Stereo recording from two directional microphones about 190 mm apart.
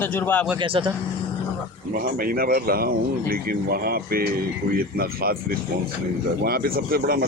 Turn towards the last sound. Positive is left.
turn(degrees=-55)  # may be behind; listen again after turning